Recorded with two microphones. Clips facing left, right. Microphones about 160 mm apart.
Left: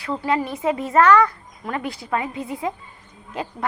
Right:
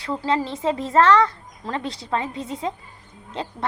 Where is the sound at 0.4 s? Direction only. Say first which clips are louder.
Left 1 dB; 25° right (ahead or behind).